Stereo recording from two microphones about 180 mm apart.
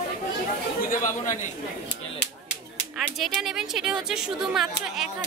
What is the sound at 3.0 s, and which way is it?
A woman's voice, centre (ahead or behind).